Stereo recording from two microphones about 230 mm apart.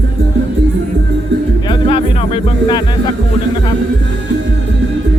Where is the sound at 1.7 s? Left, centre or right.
Left.